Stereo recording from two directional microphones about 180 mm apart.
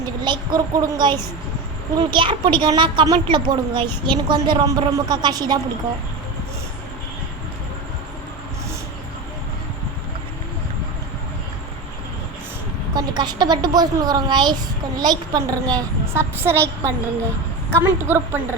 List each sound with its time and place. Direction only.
0.3 s speech: 25° right (ahead or behind)
12.9 s a woman's voice: 20° right (ahead or behind)